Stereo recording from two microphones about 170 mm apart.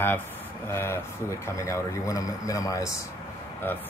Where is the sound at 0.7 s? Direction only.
15° left (ahead or behind).